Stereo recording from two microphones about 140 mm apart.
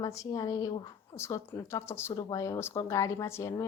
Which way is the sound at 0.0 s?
25° left (ahead or behind).